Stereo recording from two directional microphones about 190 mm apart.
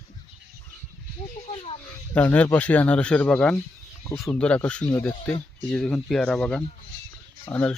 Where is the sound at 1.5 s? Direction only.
30° left (ahead or behind).